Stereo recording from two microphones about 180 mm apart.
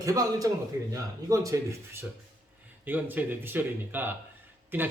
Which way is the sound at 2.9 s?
10° right (ahead or behind).